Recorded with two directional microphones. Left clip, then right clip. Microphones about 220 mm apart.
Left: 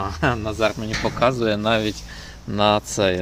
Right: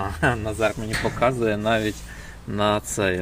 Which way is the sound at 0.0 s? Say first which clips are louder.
Left 1 dB; 5° left (ahead or behind).